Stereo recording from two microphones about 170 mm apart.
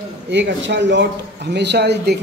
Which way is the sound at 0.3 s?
90° right.